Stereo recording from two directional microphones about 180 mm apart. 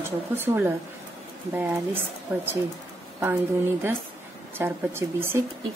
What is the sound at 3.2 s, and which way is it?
A woman's voice, 10° right (ahead or behind).